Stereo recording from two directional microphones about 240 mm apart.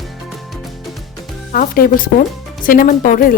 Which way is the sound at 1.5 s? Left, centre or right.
Left.